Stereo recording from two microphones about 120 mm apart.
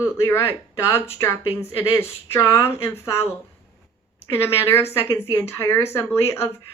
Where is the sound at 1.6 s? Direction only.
20° left (ahead or behind).